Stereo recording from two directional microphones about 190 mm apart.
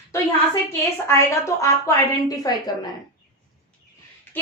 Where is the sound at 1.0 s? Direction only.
15° left (ahead or behind).